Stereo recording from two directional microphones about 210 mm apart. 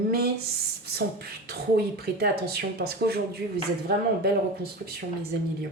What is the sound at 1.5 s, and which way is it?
Speech, 50° right (ahead or behind).